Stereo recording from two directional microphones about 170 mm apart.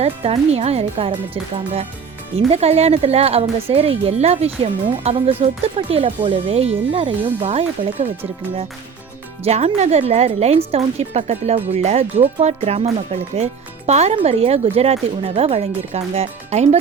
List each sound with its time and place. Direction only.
0.0 s speech: 35° right (ahead or behind)